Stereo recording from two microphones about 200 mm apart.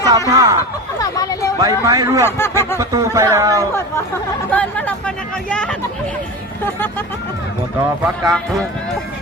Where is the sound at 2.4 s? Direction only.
10° left (ahead or behind).